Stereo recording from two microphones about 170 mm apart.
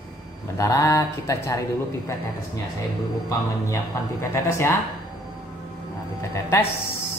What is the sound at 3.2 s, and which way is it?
Speech, 15° left (ahead or behind).